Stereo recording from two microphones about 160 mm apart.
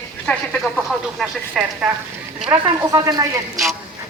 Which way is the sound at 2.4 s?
30° right (ahead or behind).